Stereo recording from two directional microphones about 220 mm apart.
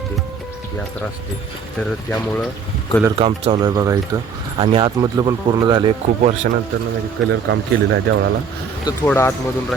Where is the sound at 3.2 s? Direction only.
25° right (ahead or behind).